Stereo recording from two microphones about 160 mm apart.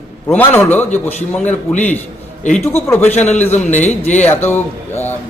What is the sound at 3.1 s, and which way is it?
Speech, 45° left (ahead or behind).